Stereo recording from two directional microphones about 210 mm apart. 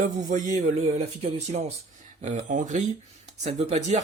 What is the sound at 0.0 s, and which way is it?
Speech, 35° right (ahead or behind).